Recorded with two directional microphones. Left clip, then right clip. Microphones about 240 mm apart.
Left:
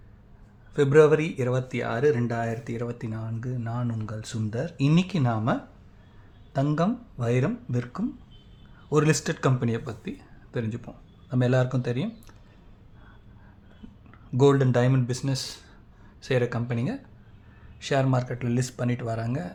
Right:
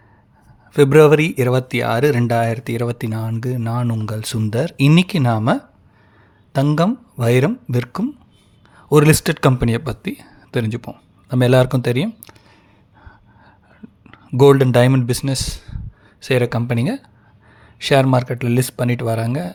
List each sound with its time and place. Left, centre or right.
0.7 s speech: right
14.1 s speech: right